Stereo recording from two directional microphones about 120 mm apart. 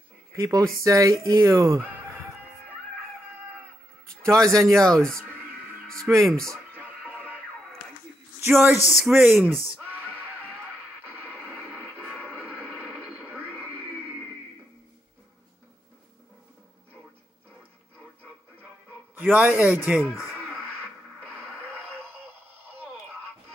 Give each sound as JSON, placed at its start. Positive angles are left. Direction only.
{"t": 0.3, "sound": "speech", "side_deg": -30}
{"t": 4.2, "sound": "a man's voice", "side_deg": -25}
{"t": 4.7, "sound": "speech", "side_deg": 5}
{"t": 6.7, "sound": "music", "side_deg": -15}
{"t": 8.4, "sound": "speech", "side_deg": -15}
{"t": 8.8, "sound": "speech", "side_deg": 0}
{"t": 9.1, "sound": "speech", "side_deg": -15}
{"t": 11.5, "sound": "radio", "side_deg": 10}
{"t": 19.1, "sound": "a man's voice", "side_deg": -15}